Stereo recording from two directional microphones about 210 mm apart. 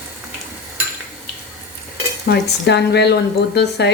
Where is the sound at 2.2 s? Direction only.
50° left (ahead or behind).